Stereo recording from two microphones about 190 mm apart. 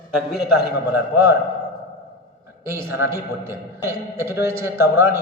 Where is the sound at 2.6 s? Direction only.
15° right (ahead or behind).